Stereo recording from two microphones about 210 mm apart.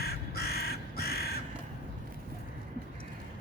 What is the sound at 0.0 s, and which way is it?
Crow, 50° left (ahead or behind).